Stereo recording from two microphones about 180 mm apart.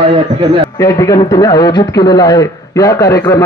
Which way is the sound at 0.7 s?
20° left (ahead or behind).